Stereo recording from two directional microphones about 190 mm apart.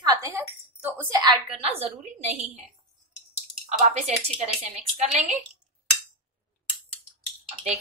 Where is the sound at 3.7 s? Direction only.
35° right (ahead or behind).